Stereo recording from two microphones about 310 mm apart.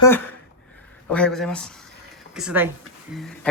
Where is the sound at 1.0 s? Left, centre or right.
Centre.